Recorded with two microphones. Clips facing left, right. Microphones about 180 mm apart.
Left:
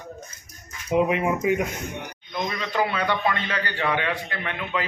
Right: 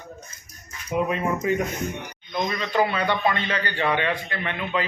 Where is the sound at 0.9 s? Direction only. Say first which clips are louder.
Left 3 dB; 15° left (ahead or behind).